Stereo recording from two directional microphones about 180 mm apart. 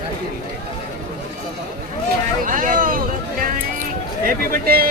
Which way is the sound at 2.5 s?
45° right (ahead or behind).